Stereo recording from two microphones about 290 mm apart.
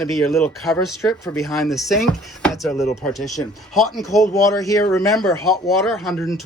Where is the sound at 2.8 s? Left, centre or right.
Left.